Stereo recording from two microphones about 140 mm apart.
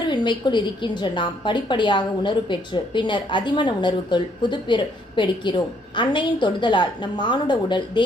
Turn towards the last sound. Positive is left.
turn(degrees=35)  # may be behind; listen again after turning